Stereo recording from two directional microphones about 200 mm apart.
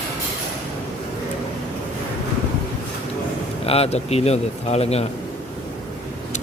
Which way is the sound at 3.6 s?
30° left (ahead or behind).